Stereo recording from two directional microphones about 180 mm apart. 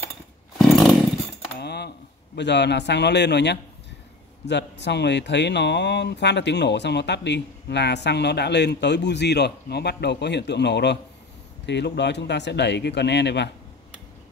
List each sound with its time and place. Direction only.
0.6 s chainsaw: centre (ahead or behind)
1.6 s speech: 65° left (ahead or behind)